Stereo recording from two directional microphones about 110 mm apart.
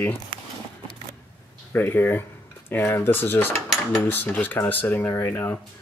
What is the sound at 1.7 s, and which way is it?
Speech, 20° left (ahead or behind).